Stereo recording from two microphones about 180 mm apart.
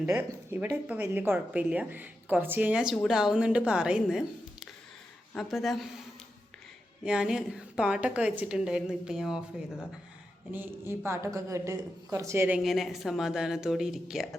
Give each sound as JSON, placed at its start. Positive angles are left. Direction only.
{"t": 0.0, "sound": "a woman's voice", "side_deg": -10}
{"t": 5.3, "sound": "a woman's voice", "side_deg": 0}
{"t": 7.0, "sound": "a woman's voice", "side_deg": -5}
{"t": 12.5, "sound": "a woman's voice", "side_deg": 0}